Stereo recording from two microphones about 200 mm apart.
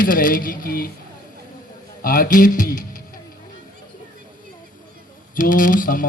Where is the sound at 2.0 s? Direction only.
45° left (ahead or behind).